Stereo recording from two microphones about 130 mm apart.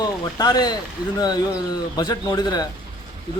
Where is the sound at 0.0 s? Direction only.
30° left (ahead or behind).